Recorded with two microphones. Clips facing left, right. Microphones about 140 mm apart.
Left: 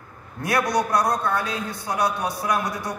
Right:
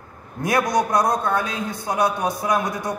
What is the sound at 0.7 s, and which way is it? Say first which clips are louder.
A man's voice: right 2 dB; 20° right (ahead or behind).